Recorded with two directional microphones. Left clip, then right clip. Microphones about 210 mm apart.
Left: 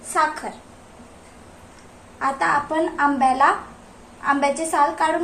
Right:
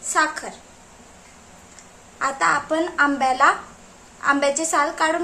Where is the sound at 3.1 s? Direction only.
25° right (ahead or behind).